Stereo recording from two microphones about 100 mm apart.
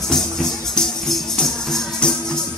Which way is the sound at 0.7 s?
5° left (ahead or behind).